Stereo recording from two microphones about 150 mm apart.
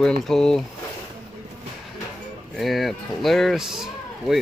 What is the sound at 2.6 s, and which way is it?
Speech, centre (ahead or behind).